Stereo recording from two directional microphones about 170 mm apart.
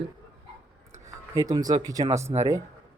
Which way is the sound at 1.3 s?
20° right (ahead or behind).